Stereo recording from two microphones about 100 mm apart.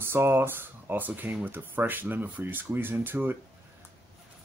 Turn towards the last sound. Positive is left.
turn(degrees=-20)  # may be behind; listen again after turning